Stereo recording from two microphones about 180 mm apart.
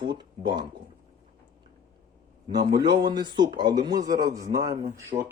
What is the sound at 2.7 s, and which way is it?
Speech, 20° right (ahead or behind).